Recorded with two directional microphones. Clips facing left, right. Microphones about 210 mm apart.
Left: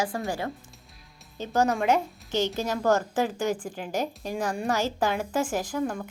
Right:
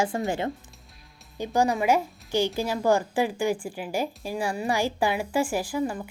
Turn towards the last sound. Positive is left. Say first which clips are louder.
# right 1 dB
turn(degrees=-5)  # may be behind; listen again after turning